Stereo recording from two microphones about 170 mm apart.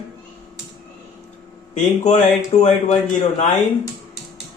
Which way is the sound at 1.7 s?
40° left (ahead or behind).